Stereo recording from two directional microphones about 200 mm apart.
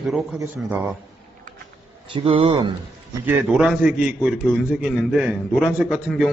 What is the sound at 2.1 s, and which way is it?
Speech, 25° right (ahead or behind).